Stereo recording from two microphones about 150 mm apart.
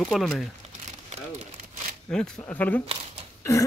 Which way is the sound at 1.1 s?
50° right (ahead or behind).